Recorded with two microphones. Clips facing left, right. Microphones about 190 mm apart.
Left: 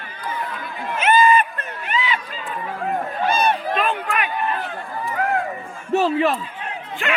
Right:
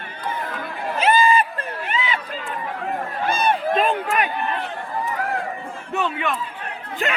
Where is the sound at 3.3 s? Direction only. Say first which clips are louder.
Left 1 dB; 50° right (ahead or behind).